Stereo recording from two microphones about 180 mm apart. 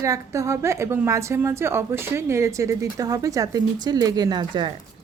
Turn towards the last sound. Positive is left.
turn(degrees=-25)  # may be behind; listen again after turning